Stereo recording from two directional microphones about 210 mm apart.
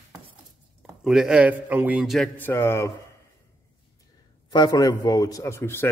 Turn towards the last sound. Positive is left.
turn(degrees=10)  # may be behind; listen again after turning